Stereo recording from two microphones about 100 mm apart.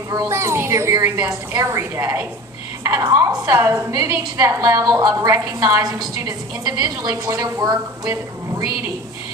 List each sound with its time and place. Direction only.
0.3 s a woman's voice: 30° right (ahead or behind)
3.0 s a woman's voice: 40° right (ahead or behind)